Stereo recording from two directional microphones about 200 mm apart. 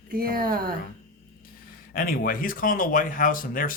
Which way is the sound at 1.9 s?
45° left (ahead or behind).